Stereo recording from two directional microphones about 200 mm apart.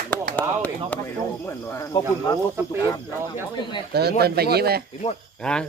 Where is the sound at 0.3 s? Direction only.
10° left (ahead or behind).